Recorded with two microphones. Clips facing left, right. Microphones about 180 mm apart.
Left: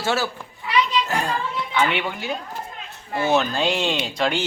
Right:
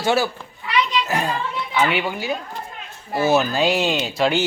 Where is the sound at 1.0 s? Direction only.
5° right (ahead or behind).